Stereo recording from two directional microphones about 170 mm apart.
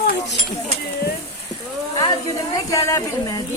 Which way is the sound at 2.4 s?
20° left (ahead or behind).